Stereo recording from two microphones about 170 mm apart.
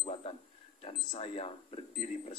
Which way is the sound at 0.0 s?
35° left (ahead or behind).